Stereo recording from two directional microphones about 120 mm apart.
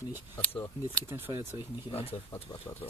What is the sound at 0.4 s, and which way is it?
Speech, 15° left (ahead or behind).